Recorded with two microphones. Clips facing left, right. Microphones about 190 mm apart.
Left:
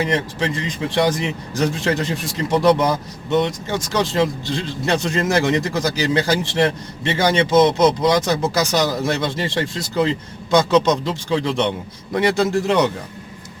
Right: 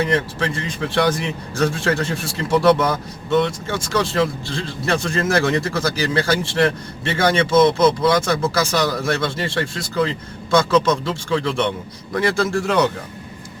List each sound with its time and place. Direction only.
0.0 s speech: 15° left (ahead or behind)